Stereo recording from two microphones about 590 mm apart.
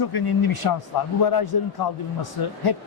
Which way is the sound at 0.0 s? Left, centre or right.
Left.